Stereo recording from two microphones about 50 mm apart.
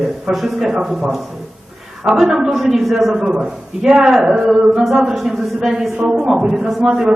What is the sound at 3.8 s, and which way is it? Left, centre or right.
A man's voice, centre.